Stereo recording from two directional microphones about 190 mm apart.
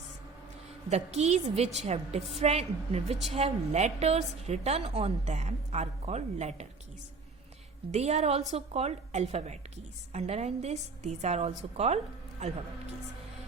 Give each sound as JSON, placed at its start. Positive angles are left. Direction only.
{"t": 0.9, "sound": "a woman's voice", "side_deg": -35}
{"t": 7.9, "sound": "a woman's voice", "side_deg": -35}